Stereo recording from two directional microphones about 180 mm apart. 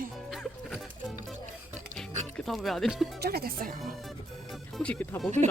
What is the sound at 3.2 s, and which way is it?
Speech, 60° right (ahead or behind).